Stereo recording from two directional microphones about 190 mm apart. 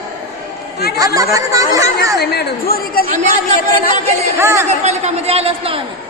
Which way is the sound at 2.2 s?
55° left (ahead or behind).